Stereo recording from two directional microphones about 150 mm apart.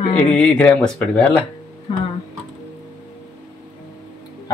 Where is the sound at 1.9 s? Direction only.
35° left (ahead or behind).